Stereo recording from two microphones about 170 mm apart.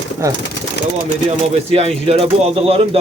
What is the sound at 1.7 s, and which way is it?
Speech, 35° right (ahead or behind).